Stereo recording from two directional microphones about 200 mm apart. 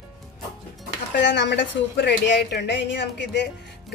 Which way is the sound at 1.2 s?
60° left (ahead or behind).